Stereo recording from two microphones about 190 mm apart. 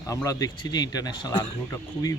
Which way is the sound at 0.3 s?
20° left (ahead or behind).